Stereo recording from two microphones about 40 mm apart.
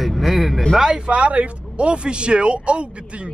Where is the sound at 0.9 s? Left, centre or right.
Right.